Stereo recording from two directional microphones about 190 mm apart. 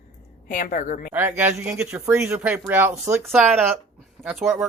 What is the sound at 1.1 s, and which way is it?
Speech, 10° right (ahead or behind).